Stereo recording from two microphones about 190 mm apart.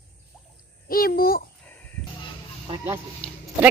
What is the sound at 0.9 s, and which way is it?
Speech, 50° left (ahead or behind).